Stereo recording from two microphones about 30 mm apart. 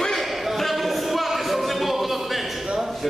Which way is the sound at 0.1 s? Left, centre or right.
Centre.